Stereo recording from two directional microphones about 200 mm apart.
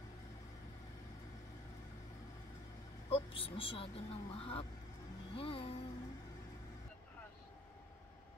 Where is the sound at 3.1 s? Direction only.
25° left (ahead or behind).